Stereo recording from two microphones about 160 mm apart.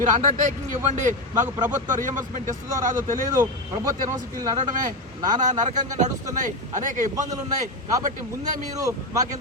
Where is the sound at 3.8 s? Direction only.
20° right (ahead or behind).